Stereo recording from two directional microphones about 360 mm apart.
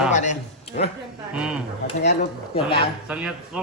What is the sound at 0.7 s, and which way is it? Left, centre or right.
Speech, centre.